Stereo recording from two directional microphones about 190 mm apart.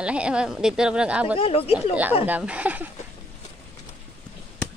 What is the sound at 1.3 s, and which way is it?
Speech, 30° left (ahead or behind).